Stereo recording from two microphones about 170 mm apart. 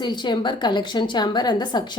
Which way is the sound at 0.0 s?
25° left (ahead or behind).